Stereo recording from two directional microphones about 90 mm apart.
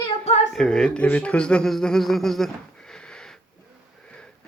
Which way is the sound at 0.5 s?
10° left (ahead or behind).